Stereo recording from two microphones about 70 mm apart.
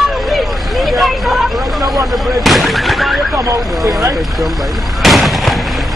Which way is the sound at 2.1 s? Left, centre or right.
Centre.